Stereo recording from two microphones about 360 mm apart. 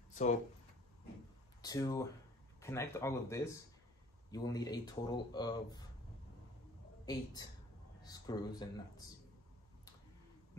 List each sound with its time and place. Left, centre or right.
0.1 s a sound: centre
1.6 s speech: centre
8.0 s speech: centre